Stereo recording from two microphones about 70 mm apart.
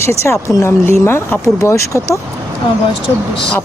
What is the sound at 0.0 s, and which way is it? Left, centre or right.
A woman's voice, left.